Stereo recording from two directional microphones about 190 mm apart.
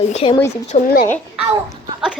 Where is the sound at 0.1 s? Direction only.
30° left (ahead or behind).